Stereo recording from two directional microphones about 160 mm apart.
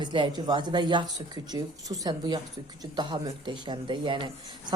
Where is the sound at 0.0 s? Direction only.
30° right (ahead or behind).